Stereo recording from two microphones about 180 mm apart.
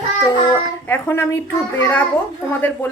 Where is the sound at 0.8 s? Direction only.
10° left (ahead or behind).